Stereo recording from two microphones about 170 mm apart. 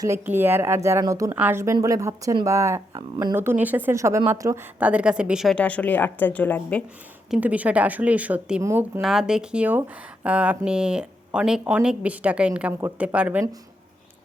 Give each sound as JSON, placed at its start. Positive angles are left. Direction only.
{"t": 0.0, "sound": "speech", "side_deg": -15}
{"t": 3.3, "sound": "a woman's voice", "side_deg": -10}
{"t": 7.3, "sound": "speech", "side_deg": -10}
{"t": 9.0, "sound": "speech", "side_deg": -5}